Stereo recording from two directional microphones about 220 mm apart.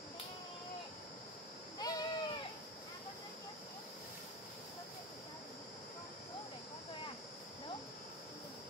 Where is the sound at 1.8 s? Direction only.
15° left (ahead or behind).